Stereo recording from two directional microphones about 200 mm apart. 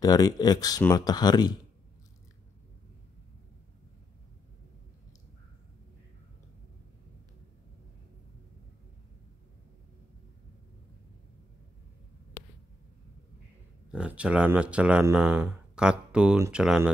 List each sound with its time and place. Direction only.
0.0 s speech: 20° left (ahead or behind)
13.9 s speech: 5° right (ahead or behind)